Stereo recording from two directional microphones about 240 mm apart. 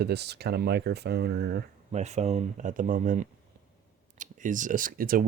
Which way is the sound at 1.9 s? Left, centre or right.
Right.